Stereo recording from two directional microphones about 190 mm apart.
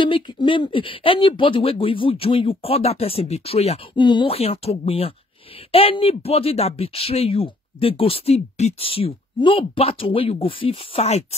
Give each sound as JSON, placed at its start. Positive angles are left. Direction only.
{"t": 0.0, "sound": "speech", "side_deg": 25}